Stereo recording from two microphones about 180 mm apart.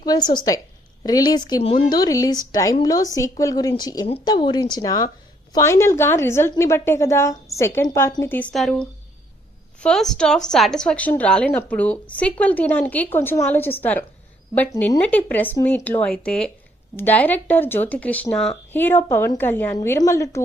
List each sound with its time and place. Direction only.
0.0 s speech: 25° left (ahead or behind)